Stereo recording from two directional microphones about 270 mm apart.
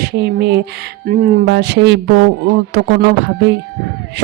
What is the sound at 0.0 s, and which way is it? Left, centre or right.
Speech, right.